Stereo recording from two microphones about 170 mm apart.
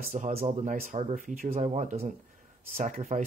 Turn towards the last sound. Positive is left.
turn(degrees=-50)  # may be behind; listen again after turning